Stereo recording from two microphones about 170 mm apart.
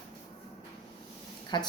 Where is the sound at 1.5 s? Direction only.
25° left (ahead or behind).